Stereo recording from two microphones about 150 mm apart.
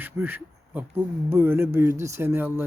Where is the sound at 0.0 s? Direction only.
10° right (ahead or behind).